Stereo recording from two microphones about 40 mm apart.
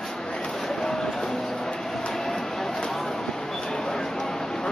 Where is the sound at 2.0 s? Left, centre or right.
Centre.